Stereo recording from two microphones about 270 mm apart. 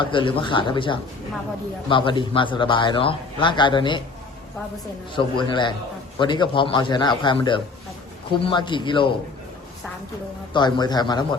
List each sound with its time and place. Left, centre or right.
0.0 s a man's voice: centre
5.1 s a man's voice: centre
10.5 s a man's voice: centre